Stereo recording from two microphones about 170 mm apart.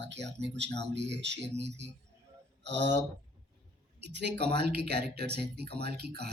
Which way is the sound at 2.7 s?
90° right.